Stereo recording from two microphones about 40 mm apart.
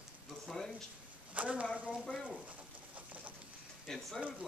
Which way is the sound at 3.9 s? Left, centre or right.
Centre.